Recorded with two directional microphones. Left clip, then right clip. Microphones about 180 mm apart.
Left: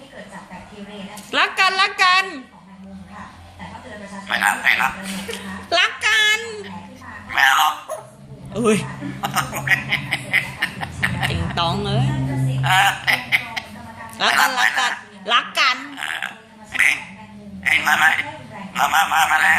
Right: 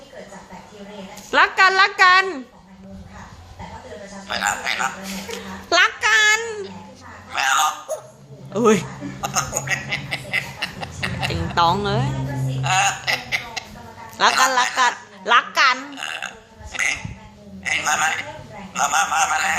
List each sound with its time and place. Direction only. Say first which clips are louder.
1.3 s a woman's voice: right 3 dB; 15° right (ahead or behind)
4.4 s a man's voice: left 5 dB; 15° right (ahead or behind)
5.3 s a sound: right 1 dB; 20° right (ahead or behind)
7.3 s speech: left 4 dB; 15° right (ahead or behind)
12.6 s a sound: left 3 dB; 15° right (ahead or behind)
14.2 s a woman's voice: even; 20° right (ahead or behind)
17.7 s a man's voice: left 5 dB; 15° right (ahead or behind)